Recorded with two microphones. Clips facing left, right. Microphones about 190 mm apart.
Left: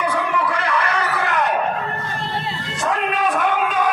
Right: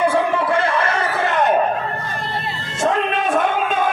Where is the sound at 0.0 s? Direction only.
30° right (ahead or behind).